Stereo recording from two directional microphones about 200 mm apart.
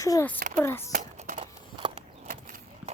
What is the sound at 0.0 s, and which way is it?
Speech, 15° left (ahead or behind).